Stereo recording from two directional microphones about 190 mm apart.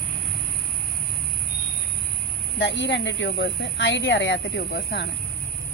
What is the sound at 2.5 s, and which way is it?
Speech, 70° left (ahead or behind).